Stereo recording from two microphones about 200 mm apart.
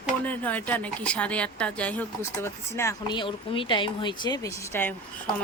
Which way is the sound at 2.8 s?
20° left (ahead or behind).